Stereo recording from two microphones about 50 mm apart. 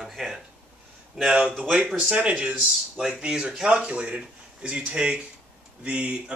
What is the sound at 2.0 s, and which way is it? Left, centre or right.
Speech, right.